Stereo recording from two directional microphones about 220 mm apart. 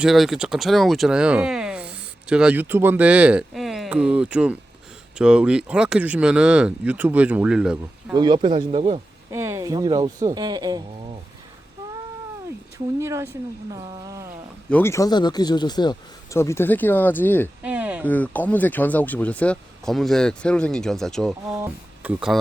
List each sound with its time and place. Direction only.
0.0 s speech: centre (ahead or behind)
8.1 s speech: 20° right (ahead or behind)
9.3 s speech: 10° right (ahead or behind)
13.0 s speech: 15° right (ahead or behind)
14.7 s speech: 10° left (ahead or behind)
17.6 s speech: 5° right (ahead or behind)
18.0 s speech: 5° left (ahead or behind)
21.4 s speech: 10° right (ahead or behind)